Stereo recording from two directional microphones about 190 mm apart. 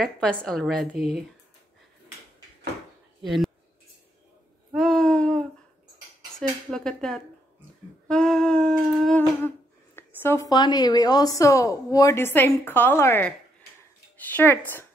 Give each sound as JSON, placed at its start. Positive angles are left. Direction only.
{"t": 0.0, "sound": "a woman's voice", "side_deg": 5}
{"t": 3.3, "sound": "speech", "side_deg": 0}
{"t": 4.7, "sound": "a sound", "side_deg": 0}
{"t": 6.3, "sound": "dishes", "side_deg": 5}
{"t": 8.1, "sound": "humming", "side_deg": 5}
{"t": 9.9, "sound": "a woman's voice", "side_deg": 15}